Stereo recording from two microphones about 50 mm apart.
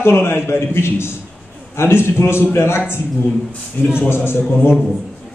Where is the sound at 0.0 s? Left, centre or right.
Left.